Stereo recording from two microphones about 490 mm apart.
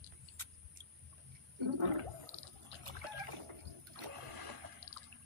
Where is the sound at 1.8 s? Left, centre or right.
Right.